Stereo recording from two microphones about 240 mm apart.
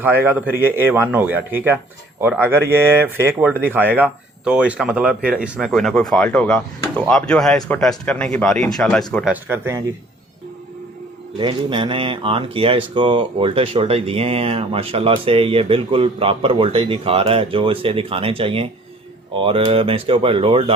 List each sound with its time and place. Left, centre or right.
0.0 s a man's voice: centre
11.3 s speech: centre